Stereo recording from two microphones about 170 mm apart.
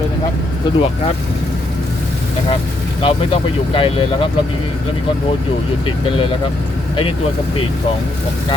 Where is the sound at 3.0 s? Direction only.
30° left (ahead or behind).